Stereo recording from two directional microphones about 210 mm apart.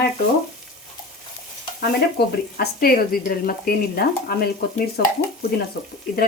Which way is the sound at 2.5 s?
45° left (ahead or behind).